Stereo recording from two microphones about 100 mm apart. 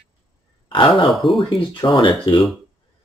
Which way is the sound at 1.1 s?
Centre (ahead or behind).